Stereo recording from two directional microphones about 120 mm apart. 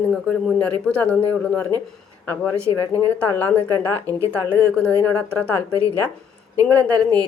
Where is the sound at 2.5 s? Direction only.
25° right (ahead or behind).